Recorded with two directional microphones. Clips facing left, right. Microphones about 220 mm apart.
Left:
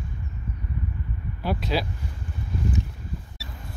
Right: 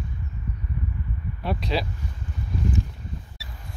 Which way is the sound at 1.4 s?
Centre (ahead or behind).